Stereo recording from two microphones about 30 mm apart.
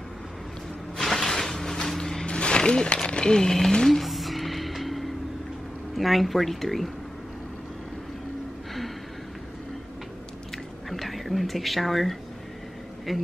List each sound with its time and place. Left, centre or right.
0.9 s sliding door: centre
2.2 s a sound: left
4.0 s music: centre
5.9 s speech: centre
10.9 s speech: centre